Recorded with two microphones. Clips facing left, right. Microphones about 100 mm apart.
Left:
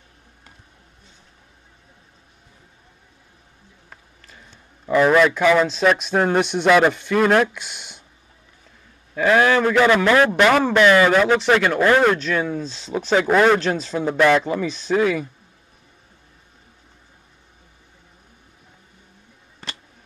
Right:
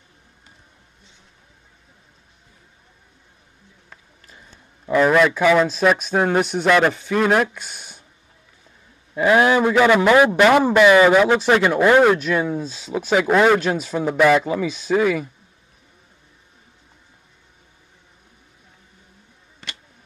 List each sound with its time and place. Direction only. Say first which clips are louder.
4.8 s a man's voice: even; centre (ahead or behind)
7.5 s speech: left 1 dB; 40° right (ahead or behind)
9.1 s speech: right 1 dB; 15° right (ahead or behind)